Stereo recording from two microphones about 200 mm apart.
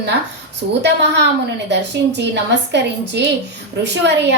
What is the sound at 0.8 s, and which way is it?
A woman's voice, 60° right (ahead or behind).